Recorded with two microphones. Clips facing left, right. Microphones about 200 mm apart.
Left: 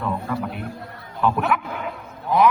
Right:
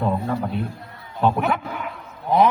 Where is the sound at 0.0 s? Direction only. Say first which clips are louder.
Right 3 dB; 30° right (ahead or behind).